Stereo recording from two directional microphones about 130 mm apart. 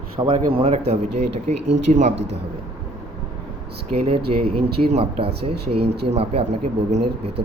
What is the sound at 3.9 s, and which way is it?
Speech, 45° right (ahead or behind).